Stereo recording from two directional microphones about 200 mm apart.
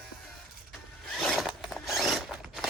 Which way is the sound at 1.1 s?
Centre (ahead or behind).